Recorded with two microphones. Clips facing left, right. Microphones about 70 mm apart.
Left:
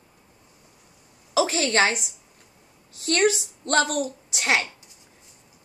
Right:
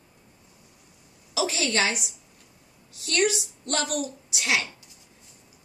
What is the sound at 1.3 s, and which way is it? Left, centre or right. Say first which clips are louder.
A woman's voice: left 4 dB; left.